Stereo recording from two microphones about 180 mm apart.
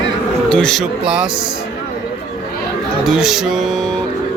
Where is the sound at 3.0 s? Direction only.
Centre (ahead or behind).